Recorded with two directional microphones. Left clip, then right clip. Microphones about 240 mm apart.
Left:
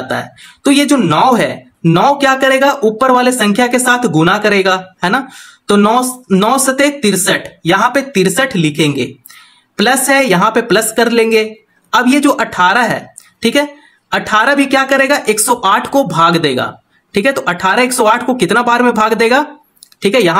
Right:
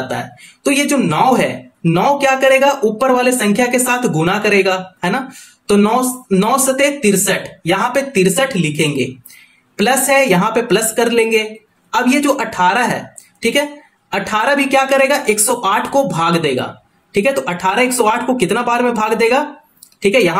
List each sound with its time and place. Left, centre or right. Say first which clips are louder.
0.7 s speech: left 4 dB; left